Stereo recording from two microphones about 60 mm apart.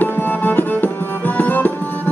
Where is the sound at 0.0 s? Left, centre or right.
Left.